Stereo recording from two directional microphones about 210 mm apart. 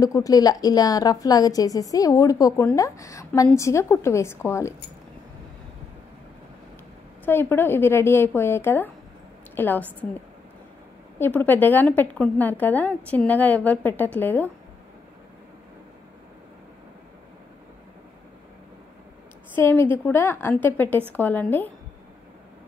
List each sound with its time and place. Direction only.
0.0 s a woman's voice: 15° left (ahead or behind)
7.2 s a woman's voice: 10° left (ahead or behind)
11.1 s a woman's voice: 10° left (ahead or behind)
19.5 s a woman's voice: 10° left (ahead or behind)